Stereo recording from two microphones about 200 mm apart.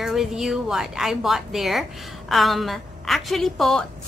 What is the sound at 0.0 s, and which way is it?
A woman's voice, centre (ahead or behind).